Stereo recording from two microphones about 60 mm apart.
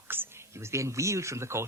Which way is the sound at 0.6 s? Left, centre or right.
Right.